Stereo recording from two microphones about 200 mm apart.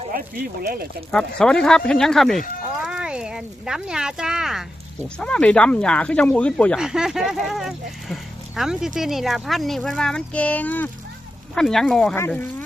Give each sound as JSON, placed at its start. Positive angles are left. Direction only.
{"t": 0.1, "sound": "speech", "side_deg": -45}
{"t": 1.4, "sound": "speech", "side_deg": 5}